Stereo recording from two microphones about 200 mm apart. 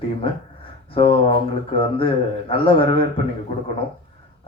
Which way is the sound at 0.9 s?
25° left (ahead or behind).